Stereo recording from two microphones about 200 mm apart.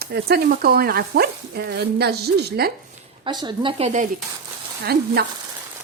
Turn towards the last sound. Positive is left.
turn(degrees=-55)  # may be behind; listen again after turning